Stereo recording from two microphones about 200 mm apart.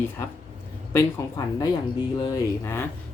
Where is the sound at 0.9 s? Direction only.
15° left (ahead or behind).